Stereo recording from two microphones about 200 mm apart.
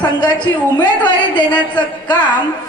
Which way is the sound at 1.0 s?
20° left (ahead or behind).